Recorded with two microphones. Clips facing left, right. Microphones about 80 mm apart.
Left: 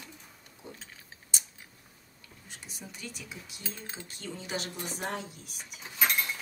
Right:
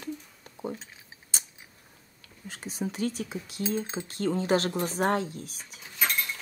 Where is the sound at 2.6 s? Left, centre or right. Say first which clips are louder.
Right 15 dB; right.